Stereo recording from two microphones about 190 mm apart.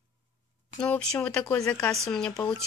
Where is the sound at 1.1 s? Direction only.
5° left (ahead or behind).